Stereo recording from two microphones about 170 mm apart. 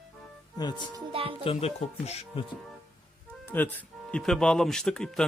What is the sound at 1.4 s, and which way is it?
Speech, 40° left (ahead or behind).